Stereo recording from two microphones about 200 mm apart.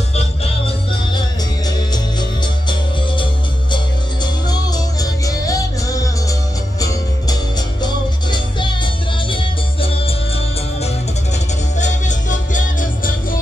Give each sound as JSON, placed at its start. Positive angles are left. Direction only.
{"t": 1.9, "sound": "music", "side_deg": 20}
{"t": 11.8, "sound": "music", "side_deg": 40}